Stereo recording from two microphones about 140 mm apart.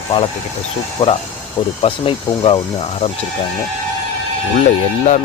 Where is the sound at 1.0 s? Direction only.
40° left (ahead or behind).